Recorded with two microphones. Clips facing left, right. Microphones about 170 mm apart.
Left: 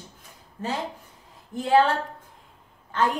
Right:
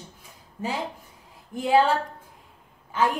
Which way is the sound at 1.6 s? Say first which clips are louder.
Even; 10° right (ahead or behind).